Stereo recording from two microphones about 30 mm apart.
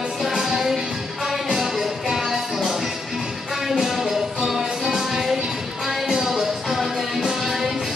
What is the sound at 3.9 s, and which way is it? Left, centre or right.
Music, centre.